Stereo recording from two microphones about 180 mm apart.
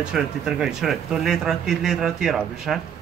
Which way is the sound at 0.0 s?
5° right (ahead or behind).